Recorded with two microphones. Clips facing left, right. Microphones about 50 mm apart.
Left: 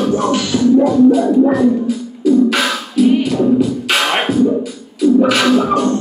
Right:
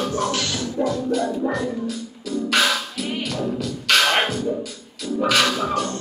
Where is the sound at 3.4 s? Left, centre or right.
Centre.